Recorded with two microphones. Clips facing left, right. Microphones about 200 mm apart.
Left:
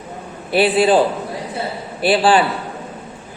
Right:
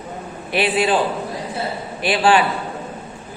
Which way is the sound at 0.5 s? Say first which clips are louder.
Left 5 dB; 35° left (ahead or behind).